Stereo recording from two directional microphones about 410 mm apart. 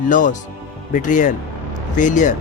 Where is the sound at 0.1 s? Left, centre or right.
Centre.